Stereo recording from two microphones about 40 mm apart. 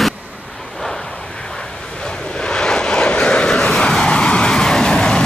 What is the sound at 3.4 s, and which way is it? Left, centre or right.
Vehicle, centre.